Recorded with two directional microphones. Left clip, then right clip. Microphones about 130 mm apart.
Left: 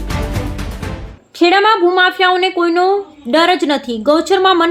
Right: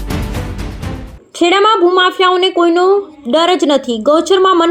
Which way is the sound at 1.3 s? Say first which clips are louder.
Right 1 dB; 10° right (ahead or behind).